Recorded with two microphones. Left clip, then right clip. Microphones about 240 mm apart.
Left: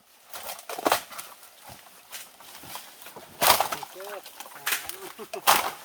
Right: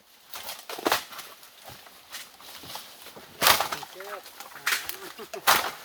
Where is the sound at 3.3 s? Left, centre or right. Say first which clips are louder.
Even; left.